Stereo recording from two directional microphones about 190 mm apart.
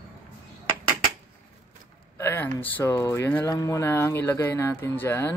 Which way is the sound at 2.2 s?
15° left (ahead or behind).